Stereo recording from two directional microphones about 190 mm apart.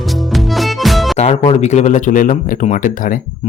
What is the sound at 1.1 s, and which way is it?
Speech, 35° left (ahead or behind).